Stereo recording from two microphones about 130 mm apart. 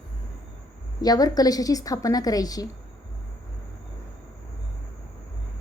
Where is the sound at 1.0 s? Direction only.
30° left (ahead or behind).